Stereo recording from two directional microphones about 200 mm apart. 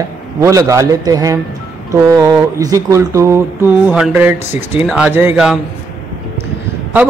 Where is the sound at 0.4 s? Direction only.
15° right (ahead or behind).